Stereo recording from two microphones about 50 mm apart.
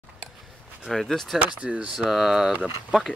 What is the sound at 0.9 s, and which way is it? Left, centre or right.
Speech, centre.